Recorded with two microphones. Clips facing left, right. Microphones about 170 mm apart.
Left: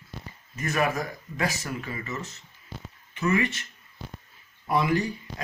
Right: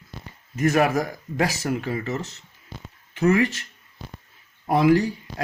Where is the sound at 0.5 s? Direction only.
80° right.